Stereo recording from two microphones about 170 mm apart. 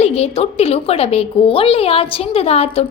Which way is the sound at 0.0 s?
35° left (ahead or behind).